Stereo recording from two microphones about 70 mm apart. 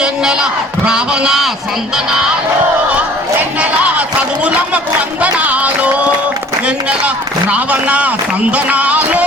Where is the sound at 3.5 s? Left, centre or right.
Centre.